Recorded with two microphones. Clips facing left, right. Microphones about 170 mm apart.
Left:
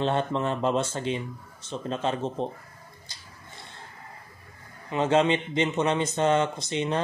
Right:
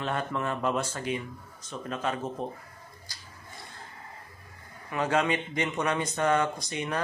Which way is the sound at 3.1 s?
25° left (ahead or behind).